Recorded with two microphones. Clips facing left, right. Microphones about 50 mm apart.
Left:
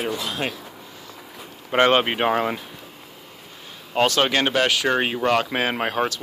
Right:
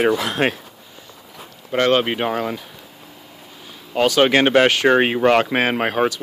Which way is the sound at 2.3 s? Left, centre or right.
Left.